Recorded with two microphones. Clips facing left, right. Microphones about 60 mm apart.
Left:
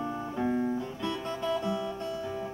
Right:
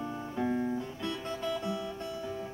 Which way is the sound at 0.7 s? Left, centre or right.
Left.